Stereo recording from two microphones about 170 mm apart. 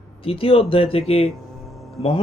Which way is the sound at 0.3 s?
35° left (ahead or behind).